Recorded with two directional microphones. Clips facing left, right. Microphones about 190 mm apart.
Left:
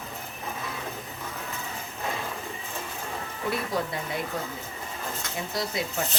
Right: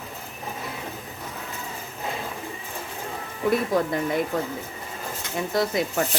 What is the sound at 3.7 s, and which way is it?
Speech, 50° right (ahead or behind).